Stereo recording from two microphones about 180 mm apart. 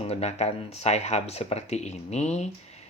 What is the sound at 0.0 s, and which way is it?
Speech, 35° left (ahead or behind).